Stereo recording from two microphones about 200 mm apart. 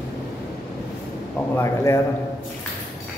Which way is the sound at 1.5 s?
15° left (ahead or behind).